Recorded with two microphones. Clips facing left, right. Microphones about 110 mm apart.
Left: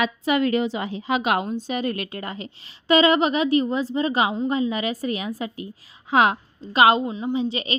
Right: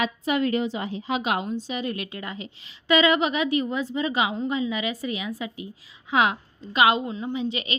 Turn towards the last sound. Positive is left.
turn(degrees=35)  # may be behind; listen again after turning